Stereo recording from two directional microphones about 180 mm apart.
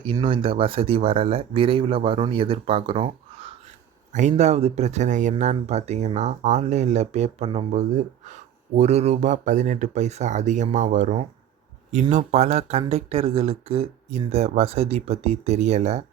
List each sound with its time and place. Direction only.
0.0 s speech: 25° right (ahead or behind)